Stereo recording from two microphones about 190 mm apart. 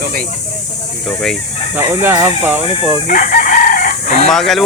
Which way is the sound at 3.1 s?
45° left (ahead or behind).